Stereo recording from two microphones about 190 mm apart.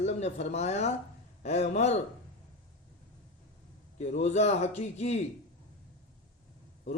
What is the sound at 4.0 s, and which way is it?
A man's voice, 35° left (ahead or behind).